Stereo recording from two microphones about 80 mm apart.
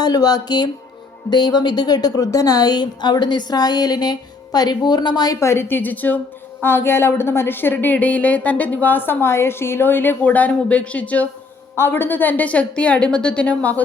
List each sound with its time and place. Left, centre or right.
0.0 s a woman's voice: left
5.4 s speech: left
11.8 s a woman's voice: left